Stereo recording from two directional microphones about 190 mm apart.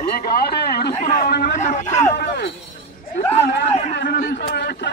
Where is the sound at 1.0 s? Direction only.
45° left (ahead or behind).